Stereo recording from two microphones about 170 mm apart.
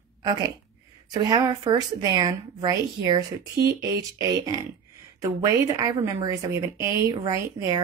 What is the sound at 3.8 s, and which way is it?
A woman's voice, 20° right (ahead or behind).